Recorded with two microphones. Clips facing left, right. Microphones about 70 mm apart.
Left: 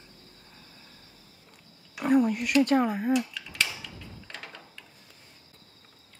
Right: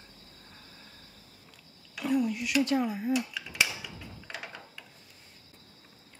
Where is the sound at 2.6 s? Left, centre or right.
Left.